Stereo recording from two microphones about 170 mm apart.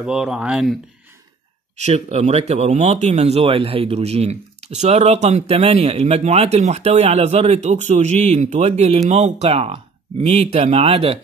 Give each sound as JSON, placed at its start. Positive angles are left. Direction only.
{"t": 0.0, "sound": "speech", "side_deg": -5}
{"t": 1.8, "sound": "a man's voice", "side_deg": -40}